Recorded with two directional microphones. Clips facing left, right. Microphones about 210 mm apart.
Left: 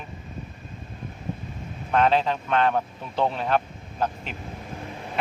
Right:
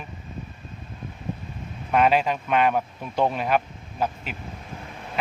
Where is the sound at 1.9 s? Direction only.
10° right (ahead or behind).